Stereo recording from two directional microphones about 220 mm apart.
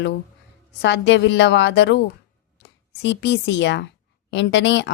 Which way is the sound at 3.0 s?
55° left (ahead or behind).